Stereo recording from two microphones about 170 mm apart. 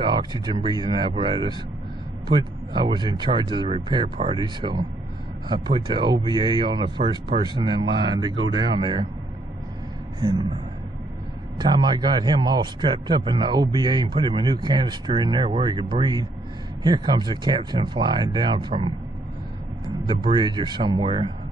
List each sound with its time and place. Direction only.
0.0 s a man's voice: 25° right (ahead or behind)
11.5 s a man's voice: 25° right (ahead or behind)
20.1 s a man's voice: 25° right (ahead or behind)